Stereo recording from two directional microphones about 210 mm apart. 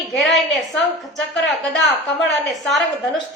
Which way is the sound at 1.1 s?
55° left (ahead or behind).